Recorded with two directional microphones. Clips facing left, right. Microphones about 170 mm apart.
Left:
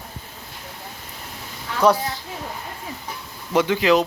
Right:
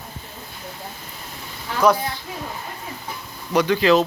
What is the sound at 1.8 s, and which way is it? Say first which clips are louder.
Speech: even; 30° left (ahead or behind).